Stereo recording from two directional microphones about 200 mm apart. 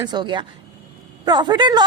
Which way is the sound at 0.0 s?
20° right (ahead or behind).